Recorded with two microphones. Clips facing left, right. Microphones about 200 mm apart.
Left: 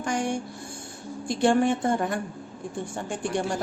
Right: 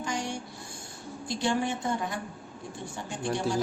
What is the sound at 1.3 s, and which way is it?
A woman's voice, 55° left (ahead or behind).